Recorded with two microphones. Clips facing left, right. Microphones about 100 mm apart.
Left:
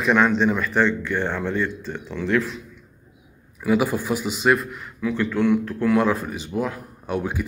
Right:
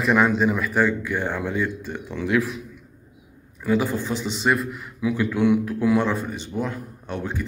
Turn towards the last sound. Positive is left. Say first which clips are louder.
# left 3 dB
turn(degrees=10)  # may be behind; listen again after turning